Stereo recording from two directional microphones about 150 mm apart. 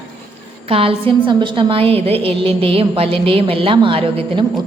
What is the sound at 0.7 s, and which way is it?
A woman's voice, 40° right (ahead or behind).